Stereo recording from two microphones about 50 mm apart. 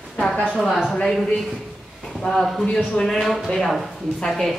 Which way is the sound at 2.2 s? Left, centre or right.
Centre.